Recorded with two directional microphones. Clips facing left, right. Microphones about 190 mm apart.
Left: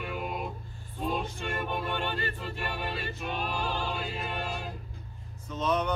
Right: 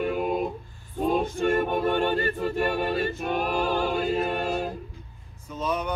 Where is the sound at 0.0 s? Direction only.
45° right (ahead or behind).